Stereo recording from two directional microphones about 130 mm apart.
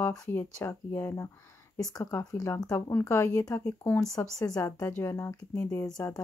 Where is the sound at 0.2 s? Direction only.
20° left (ahead or behind).